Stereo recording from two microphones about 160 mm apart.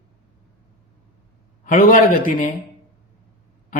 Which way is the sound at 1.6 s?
60° left (ahead or behind).